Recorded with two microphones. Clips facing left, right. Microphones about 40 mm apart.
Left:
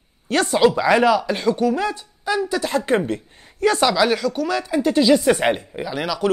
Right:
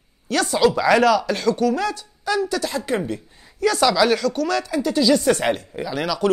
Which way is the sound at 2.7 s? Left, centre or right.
Left.